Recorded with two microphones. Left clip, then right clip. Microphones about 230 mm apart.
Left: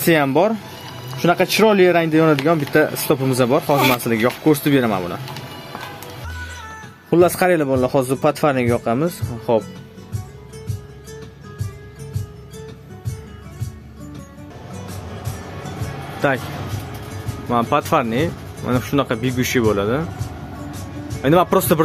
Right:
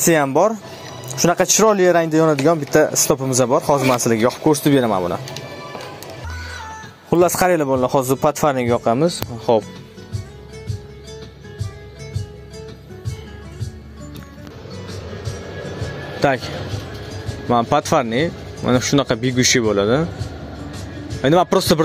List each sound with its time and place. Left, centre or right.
0.0 s speech: centre
7.1 s speech: centre
16.2 s speech: centre
17.5 s speech: right
21.2 s speech: right